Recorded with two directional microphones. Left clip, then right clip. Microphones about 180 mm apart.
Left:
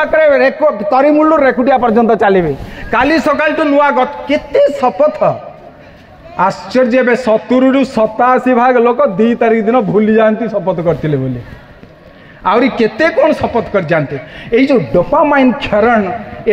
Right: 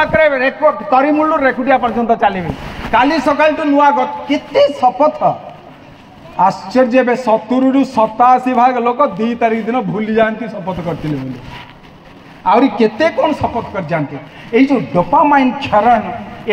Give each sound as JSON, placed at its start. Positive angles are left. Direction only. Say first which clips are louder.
{"t": 0.0, "sound": "a man's voice", "louder": "left 3 dB", "side_deg": 70}
{"t": 2.9, "sound": "a man's voice", "louder": "left 1 dB", "side_deg": 55}
{"t": 6.3, "sound": "a man's voice", "louder": "even", "side_deg": 50}
{"t": 12.4, "sound": "a man's voice", "louder": "even", "side_deg": 55}